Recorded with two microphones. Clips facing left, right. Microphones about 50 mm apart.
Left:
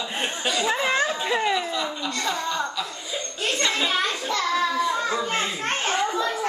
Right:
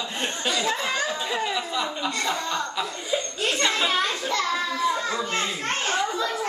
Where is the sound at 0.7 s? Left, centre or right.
Centre.